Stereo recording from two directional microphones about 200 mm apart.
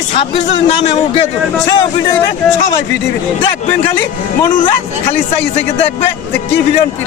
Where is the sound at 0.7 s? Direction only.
30° left (ahead or behind).